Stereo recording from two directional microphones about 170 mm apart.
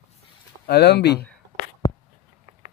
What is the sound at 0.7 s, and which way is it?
Speech, 75° left (ahead or behind).